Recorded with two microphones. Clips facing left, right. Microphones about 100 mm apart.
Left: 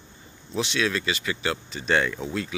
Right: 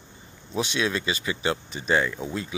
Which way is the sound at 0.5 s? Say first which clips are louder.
Even; 25° right (ahead or behind).